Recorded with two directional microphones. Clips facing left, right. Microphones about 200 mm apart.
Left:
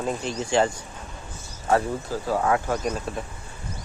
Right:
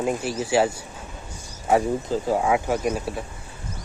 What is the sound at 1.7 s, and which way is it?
Speech, 15° right (ahead or behind).